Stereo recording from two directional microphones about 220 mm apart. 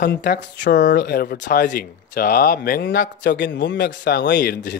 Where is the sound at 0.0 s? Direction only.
50° left (ahead or behind).